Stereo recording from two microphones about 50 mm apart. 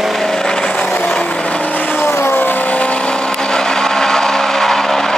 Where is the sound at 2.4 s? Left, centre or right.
Left.